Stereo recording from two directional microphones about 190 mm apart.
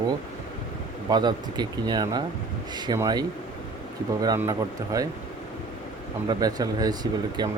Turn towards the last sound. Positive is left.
turn(degrees=-20)  # may be behind; listen again after turning